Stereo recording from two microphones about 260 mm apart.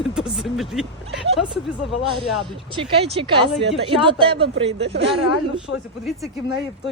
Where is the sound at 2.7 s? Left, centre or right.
Centre.